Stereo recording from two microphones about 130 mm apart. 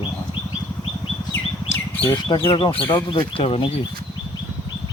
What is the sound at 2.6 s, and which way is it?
Speech, 45° left (ahead or behind).